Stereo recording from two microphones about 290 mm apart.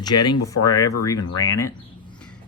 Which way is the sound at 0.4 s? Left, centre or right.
Centre.